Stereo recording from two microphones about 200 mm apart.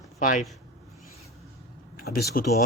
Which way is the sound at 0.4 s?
Centre (ahead or behind).